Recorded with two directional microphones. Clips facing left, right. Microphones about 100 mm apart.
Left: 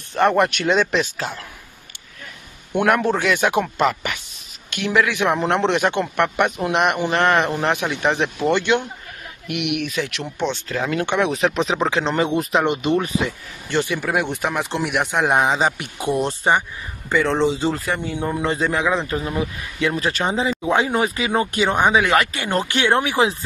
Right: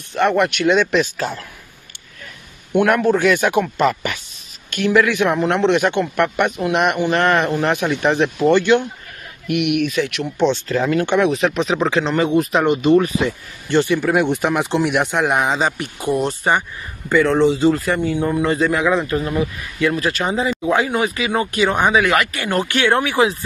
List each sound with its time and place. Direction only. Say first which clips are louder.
0.2 s speech: right 1 dB; 35° left (ahead or behind)
1.1 s speech: right 4 dB; 15° left (ahead or behind)
2.8 s speech: right 3 dB; 20° left (ahead or behind)
3.8 s speech: right 2 dB; 5° left (ahead or behind)
4.7 s speech: right 4 dB; 20° left (ahead or behind)
7.6 s speech: right 3 dB; 10° left (ahead or behind); by 10.2 s 30° left (ahead or behind)
10.5 s speech: right 5 dB; 5° left (ahead or behind)
11.2 s speech: right 2 dB; 25° left (ahead or behind)
13.8 s speech: right 5 dB; 5° left (ahead or behind)
15.1 s speech: even; 20° left (ahead or behind)
22.0 s speech: right 1 dB; 30° left (ahead or behind)